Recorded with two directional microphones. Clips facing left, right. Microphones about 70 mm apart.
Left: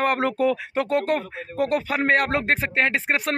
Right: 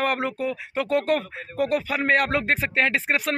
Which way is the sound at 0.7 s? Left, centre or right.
Left.